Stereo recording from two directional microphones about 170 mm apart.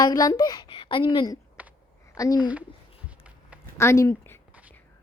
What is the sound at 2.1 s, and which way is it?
Speech, 20° left (ahead or behind).